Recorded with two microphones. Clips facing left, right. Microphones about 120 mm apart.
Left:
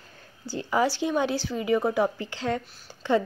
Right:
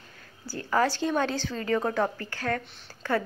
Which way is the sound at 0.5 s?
15° left (ahead or behind).